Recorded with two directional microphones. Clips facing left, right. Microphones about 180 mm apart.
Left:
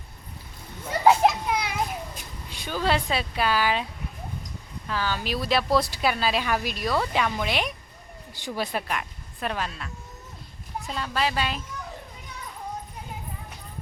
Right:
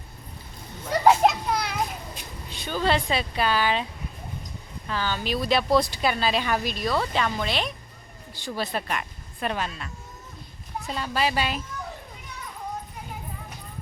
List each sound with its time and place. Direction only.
0.9 s children playing: 10° left (ahead or behind)
2.5 s speech: 10° left (ahead or behind)
4.9 s speech: 5° left (ahead or behind)